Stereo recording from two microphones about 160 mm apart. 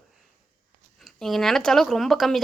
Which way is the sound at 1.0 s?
Centre (ahead or behind).